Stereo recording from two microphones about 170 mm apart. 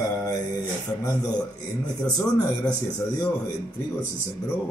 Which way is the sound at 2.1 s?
20° left (ahead or behind).